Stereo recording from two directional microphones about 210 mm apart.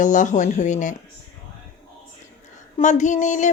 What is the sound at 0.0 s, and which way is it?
Speech, 35° left (ahead or behind).